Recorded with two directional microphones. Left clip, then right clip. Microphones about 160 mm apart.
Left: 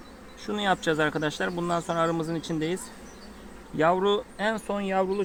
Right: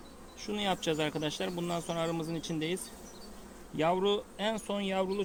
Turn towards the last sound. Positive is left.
turn(degrees=-25)  # may be behind; listen again after turning